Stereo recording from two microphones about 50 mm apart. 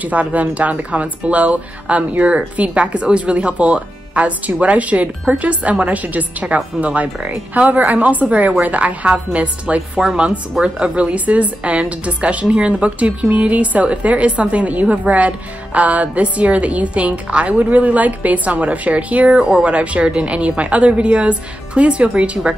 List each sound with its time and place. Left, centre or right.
0.0 s a woman's voice: right